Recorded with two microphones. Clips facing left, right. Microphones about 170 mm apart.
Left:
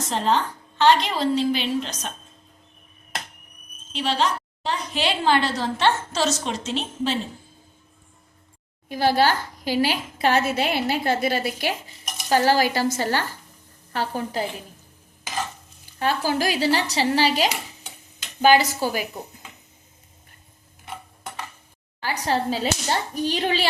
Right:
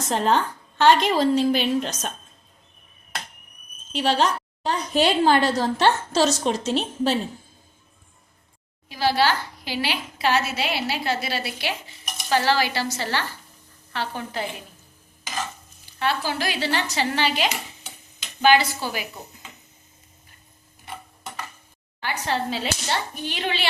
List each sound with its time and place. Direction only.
0.1 s a woman's voice: 50° right (ahead or behind)
3.9 s a woman's voice: 45° right (ahead or behind)
8.9 s a woman's voice: 50° left (ahead or behind)
15.9 s a child's voice: 45° left (ahead or behind)
22.0 s a child's voice: 35° left (ahead or behind)